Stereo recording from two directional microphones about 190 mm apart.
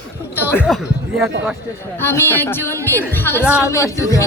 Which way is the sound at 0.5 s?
5° left (ahead or behind).